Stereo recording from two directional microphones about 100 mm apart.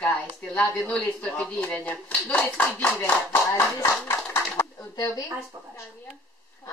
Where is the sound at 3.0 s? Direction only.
25° left (ahead or behind).